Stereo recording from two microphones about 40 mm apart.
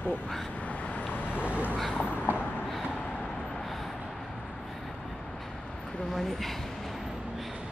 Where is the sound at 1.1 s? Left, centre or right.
Left.